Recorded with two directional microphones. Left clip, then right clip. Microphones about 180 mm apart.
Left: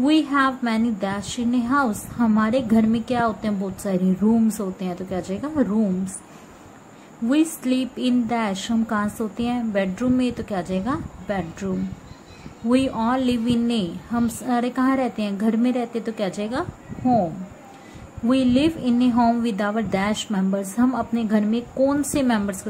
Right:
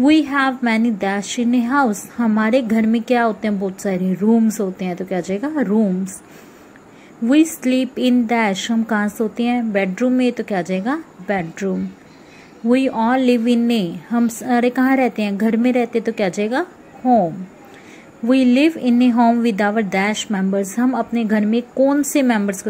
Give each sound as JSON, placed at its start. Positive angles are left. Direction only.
{"t": 0.0, "sound": "a woman's voice", "side_deg": -20}
{"t": 7.2, "sound": "a woman's voice", "side_deg": -20}
{"t": 18.3, "sound": "a woman's voice", "side_deg": -20}